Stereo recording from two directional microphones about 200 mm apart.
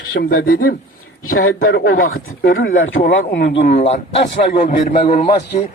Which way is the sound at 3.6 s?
35° left (ahead or behind).